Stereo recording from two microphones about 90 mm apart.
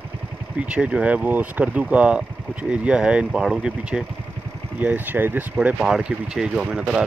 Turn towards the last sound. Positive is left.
turn(degrees=-10)  # may be behind; listen again after turning